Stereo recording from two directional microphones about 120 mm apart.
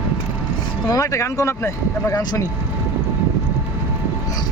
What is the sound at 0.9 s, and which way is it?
Speech, 30° left (ahead or behind).